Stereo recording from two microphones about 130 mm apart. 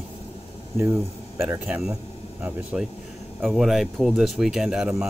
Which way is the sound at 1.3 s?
20° right (ahead or behind).